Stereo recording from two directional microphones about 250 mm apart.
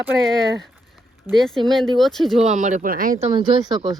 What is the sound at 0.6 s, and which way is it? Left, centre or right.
Speech, centre.